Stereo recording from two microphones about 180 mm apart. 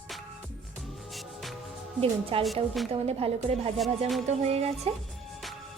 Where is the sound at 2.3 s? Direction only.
30° right (ahead or behind).